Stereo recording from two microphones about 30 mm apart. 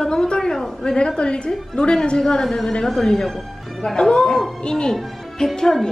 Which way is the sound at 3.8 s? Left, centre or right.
Left.